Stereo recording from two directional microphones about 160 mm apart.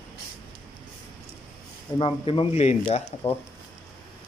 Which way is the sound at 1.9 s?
30° left (ahead or behind).